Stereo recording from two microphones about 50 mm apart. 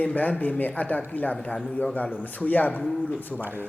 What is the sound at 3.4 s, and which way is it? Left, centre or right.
Speech, right.